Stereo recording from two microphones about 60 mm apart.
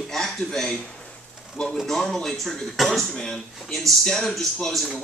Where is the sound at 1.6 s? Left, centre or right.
Centre.